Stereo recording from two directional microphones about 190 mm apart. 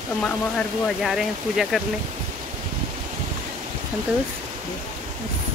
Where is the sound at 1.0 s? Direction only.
Centre (ahead or behind).